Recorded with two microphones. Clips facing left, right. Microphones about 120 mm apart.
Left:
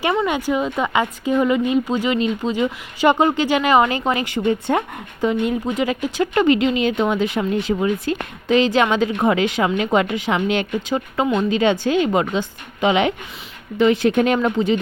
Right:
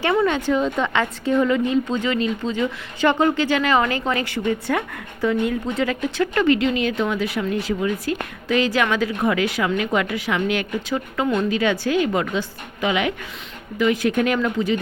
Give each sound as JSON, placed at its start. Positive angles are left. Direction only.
{"t": 0.3, "sound": "a woman's voice", "side_deg": 10}